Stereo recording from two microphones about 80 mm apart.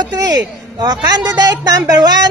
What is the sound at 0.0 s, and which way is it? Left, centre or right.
Speech, right.